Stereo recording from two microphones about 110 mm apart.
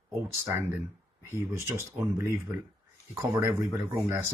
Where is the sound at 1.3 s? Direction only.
25° right (ahead or behind).